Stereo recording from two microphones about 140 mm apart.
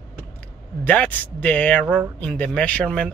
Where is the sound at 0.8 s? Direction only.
10° left (ahead or behind).